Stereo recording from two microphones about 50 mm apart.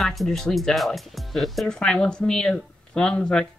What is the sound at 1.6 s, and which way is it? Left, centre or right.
Speech, centre.